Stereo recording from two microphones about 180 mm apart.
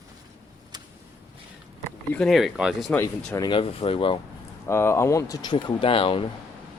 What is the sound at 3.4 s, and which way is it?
Speech, 25° left (ahead or behind).